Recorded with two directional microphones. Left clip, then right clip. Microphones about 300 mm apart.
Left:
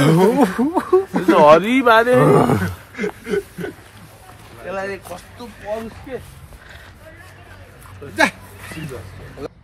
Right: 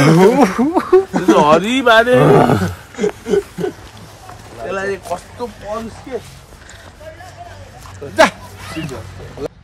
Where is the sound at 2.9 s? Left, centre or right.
Centre.